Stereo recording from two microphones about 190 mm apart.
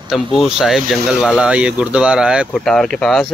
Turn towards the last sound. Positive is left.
turn(degrees=0)  # may be behind; listen again after turning